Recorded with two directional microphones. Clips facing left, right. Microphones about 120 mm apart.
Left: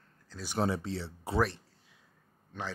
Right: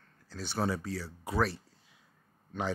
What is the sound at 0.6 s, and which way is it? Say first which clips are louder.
Speech: left 2 dB; 25° left (ahead or behind).